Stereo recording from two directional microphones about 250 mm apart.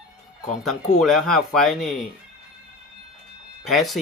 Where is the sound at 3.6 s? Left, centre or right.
Centre.